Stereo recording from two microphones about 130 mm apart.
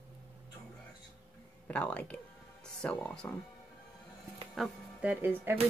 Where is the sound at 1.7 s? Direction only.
10° left (ahead or behind).